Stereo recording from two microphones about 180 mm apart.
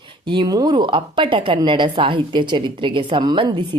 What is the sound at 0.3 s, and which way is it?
A woman's voice, 25° right (ahead or behind).